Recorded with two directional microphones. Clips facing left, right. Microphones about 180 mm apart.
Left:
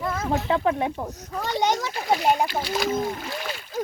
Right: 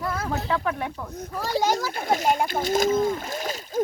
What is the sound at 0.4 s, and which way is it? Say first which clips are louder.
Speech: left 4 dB; 30° left (ahead or behind).